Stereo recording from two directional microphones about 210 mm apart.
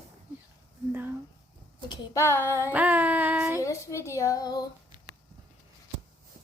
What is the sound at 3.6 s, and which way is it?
A woman's voice, 15° left (ahead or behind).